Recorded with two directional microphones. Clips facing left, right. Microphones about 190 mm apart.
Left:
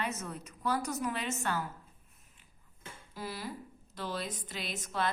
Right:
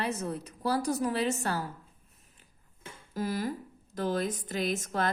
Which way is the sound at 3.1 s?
45° right (ahead or behind).